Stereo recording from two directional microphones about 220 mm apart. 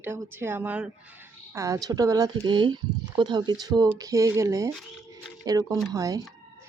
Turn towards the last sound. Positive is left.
turn(degrees=-15)  # may be behind; listen again after turning